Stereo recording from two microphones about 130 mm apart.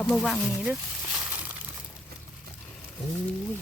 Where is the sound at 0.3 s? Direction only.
5° right (ahead or behind).